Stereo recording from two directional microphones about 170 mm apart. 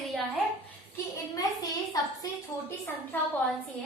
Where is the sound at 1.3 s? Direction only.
20° left (ahead or behind).